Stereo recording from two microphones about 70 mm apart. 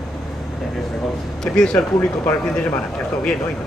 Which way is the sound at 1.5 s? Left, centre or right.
Centre.